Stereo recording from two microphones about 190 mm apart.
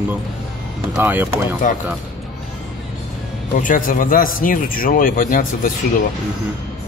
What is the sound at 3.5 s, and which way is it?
Speech, 45° left (ahead or behind).